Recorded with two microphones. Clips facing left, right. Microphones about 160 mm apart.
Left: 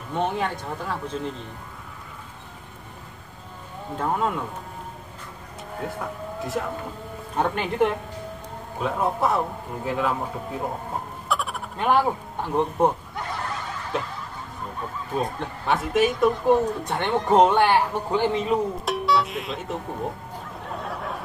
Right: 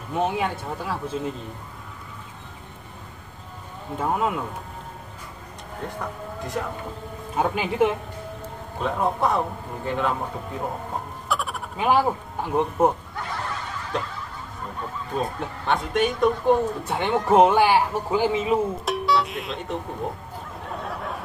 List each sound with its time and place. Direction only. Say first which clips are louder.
0.1 s speech: right 1 dB; 5° right (ahead or behind)
4.0 s speech: right 1 dB; 5° right (ahead or behind)
5.8 s speech: left 1 dB; 5° left (ahead or behind)
11.2 s speech: even; centre (ahead or behind)
13.9 s speech: even; 5° left (ahead or behind)
15.1 s speech: even; 5° left (ahead or behind)
20.6 s a sound: even; centre (ahead or behind)